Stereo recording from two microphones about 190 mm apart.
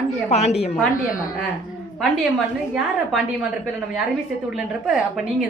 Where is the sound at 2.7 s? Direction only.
5° right (ahead or behind).